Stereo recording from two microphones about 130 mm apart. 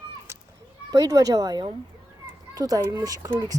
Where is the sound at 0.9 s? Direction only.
25° right (ahead or behind).